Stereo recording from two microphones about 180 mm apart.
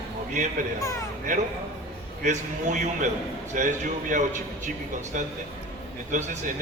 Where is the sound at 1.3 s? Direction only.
45° right (ahead or behind).